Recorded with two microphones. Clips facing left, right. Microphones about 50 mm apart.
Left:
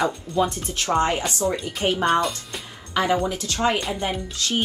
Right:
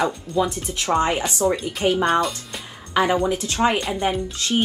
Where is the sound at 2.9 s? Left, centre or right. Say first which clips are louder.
Right 3 dB; right.